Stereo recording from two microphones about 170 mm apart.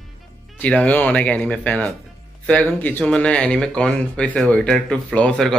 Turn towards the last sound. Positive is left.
turn(degrees=5)  # may be behind; listen again after turning